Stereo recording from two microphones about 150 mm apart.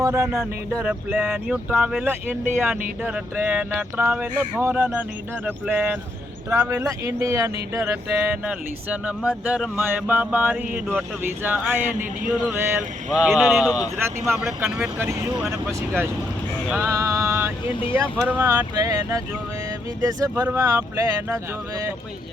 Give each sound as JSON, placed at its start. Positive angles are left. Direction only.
{"t": 0.0, "sound": "music", "side_deg": -20}
{"t": 0.8, "sound": "speech", "side_deg": -10}
{"t": 13.1, "sound": "speech", "side_deg": 0}
{"t": 13.7, "sound": "speech", "side_deg": 25}
{"t": 14.3, "sound": "speech", "side_deg": -15}
{"t": 16.8, "sound": "music", "side_deg": -20}
{"t": 17.9, "sound": "speech", "side_deg": -10}
{"t": 18.7, "sound": "speech", "side_deg": -25}
{"t": 20.3, "sound": "speech", "side_deg": -15}